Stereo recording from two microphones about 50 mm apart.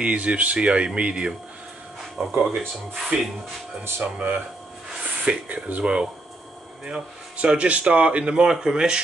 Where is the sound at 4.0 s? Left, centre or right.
Right.